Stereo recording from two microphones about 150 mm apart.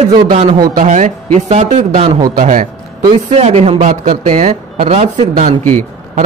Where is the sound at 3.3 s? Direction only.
45° right (ahead or behind).